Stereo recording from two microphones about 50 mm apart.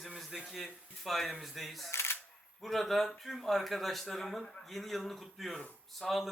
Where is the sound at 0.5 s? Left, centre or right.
Centre.